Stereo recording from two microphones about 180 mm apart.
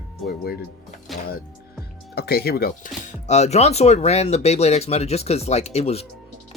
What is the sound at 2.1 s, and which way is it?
Speech, 60° left (ahead or behind).